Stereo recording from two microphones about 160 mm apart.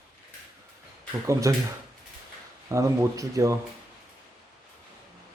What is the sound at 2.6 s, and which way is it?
Speech, 20° right (ahead or behind).